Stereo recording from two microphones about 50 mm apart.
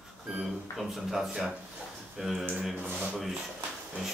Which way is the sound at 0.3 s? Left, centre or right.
Centre.